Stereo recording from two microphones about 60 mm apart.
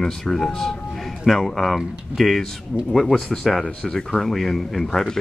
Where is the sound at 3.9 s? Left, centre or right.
Centre.